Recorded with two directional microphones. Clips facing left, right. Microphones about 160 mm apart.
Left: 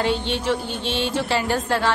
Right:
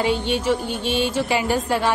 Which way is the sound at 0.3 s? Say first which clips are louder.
Right 2 dB; 10° right (ahead or behind).